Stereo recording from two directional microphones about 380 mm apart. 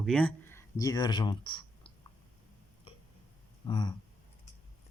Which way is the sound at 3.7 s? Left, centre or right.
Centre.